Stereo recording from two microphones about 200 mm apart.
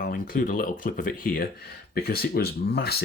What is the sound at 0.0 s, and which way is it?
Speech, 40° left (ahead or behind).